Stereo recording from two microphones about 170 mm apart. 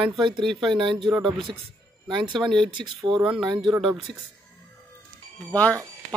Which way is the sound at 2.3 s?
Centre (ahead or behind).